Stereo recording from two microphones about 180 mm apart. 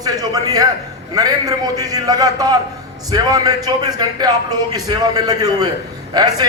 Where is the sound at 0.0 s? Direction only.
20° right (ahead or behind).